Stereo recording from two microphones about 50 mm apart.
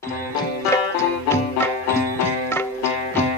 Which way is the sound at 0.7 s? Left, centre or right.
Left.